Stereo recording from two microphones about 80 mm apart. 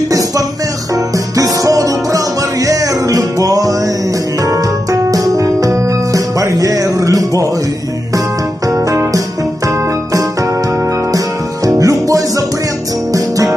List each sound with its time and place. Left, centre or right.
0.9 s music: right
8.7 s music: right
11.1 s music: right